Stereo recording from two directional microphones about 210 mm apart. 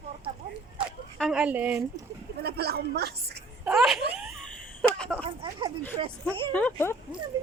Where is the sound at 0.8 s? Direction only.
5° right (ahead or behind).